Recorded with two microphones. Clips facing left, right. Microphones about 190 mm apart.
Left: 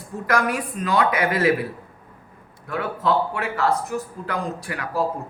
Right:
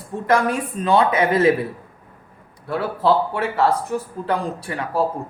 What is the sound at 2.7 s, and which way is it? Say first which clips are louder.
Speech: right 4 dB; 30° right (ahead or behind).